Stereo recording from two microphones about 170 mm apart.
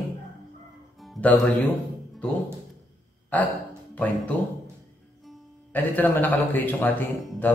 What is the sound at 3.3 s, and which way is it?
Speech, 10° left (ahead or behind).